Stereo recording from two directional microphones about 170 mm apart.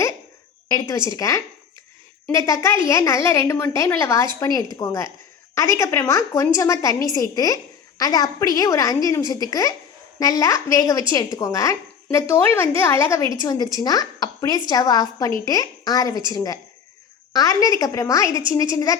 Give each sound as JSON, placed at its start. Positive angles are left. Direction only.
{"t": 0.7, "sound": "a woman's voice", "side_deg": 20}